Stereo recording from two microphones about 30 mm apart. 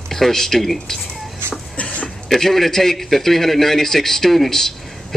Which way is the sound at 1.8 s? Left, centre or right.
Left.